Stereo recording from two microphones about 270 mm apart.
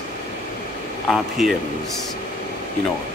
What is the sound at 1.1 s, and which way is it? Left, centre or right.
Speech, centre.